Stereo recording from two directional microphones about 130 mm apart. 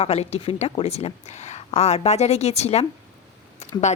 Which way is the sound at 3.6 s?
60° left (ahead or behind).